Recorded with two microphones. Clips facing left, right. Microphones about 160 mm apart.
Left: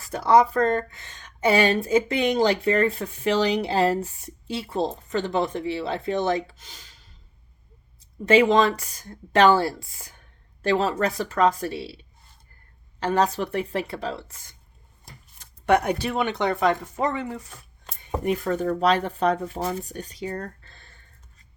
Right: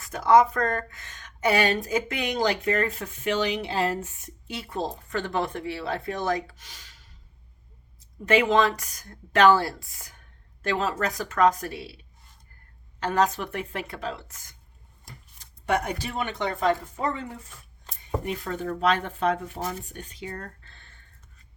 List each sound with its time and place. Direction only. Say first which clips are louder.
0.0 s speech: left 1 dB; 35° left (ahead or behind)
8.2 s a woman's voice: left 3 dB; 30° left (ahead or behind)
13.0 s a woman's voice: left 2 dB; 30° left (ahead or behind)
15.6 s speech: left 6 dB; 65° left (ahead or behind); by 17.5 s 80° left
17.8 s speech: left 5 dB; 50° left (ahead or behind)